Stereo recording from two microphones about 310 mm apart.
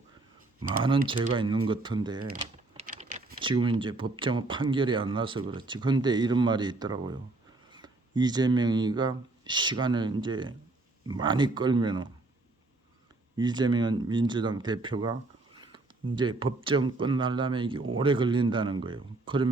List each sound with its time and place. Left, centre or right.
1.0 s speech: centre
2.2 s speech: right
13.3 s speech: centre
15.6 s a sound: centre
16.6 s speech: centre